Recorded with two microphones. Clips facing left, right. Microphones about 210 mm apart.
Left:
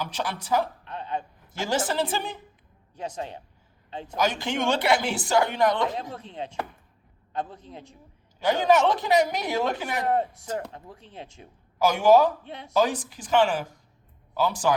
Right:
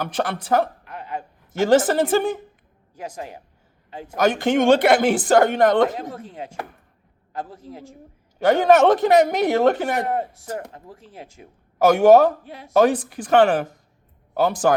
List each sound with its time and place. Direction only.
0.0 s speech: 55° right (ahead or behind)
0.9 s a sound: 30° left (ahead or behind)
1.5 s speech: 55° right (ahead or behind)
3.2 s a man's voice: 25° left (ahead or behind)
4.1 s speech: 55° right (ahead or behind)
6.2 s a man's voice: 5° right (ahead or behind)
8.4 s a woman's voice: 55° right (ahead or behind)
10.7 s speech: 35° right (ahead or behind)
11.0 s speech: 5° right (ahead or behind)
11.8 s a woman's voice: 55° right (ahead or behind)